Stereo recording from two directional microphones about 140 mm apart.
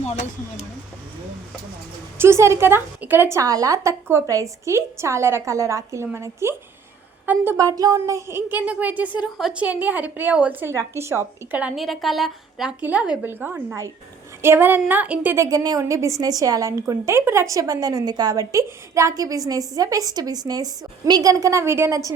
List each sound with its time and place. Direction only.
2.1 s a woman's voice: 20° right (ahead or behind)
15.4 s a woman's voice: 25° right (ahead or behind)